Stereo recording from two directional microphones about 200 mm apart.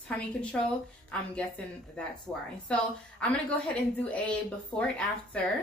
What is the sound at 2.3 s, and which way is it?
A woman's voice, 15° left (ahead or behind).